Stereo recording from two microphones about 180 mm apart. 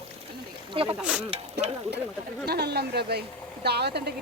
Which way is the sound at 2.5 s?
65° right (ahead or behind).